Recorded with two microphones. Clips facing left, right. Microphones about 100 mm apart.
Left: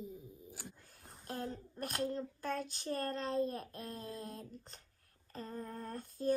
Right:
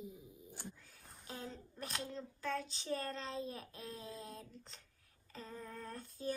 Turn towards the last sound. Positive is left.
turn(degrees=50)  # may be behind; listen again after turning